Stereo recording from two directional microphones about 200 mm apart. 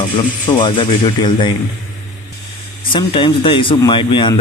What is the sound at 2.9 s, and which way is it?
Speech, 25° left (ahead or behind).